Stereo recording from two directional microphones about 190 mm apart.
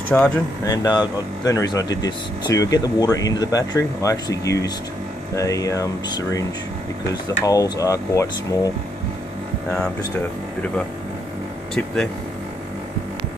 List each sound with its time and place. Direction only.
0.1 s speech: 10° left (ahead or behind)
0.7 s speech: 20° left (ahead or behind)
11.7 s speech: 5° left (ahead or behind)